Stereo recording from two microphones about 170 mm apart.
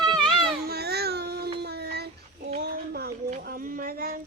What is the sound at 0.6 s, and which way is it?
Baby cry, 70° right (ahead or behind).